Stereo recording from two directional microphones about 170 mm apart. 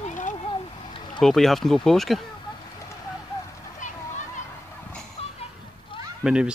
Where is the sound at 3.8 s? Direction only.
45° left (ahead or behind).